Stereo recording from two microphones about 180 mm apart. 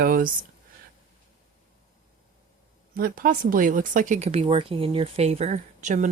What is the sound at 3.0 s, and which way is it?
Speech, 55° right (ahead or behind).